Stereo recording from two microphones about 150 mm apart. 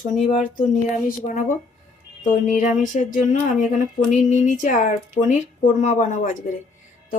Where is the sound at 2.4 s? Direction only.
60° left (ahead or behind).